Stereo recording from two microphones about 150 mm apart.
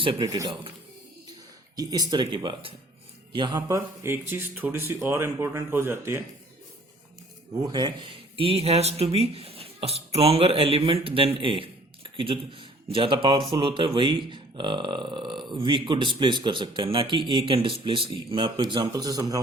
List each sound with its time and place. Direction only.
0.0 s speech: 30° right (ahead or behind)
1.7 s speech: 25° right (ahead or behind)
3.8 s speech: 15° right (ahead or behind)
7.5 s speech: 25° right (ahead or behind)